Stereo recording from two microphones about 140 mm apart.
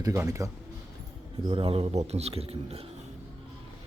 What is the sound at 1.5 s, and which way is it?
Speech, 40° right (ahead or behind).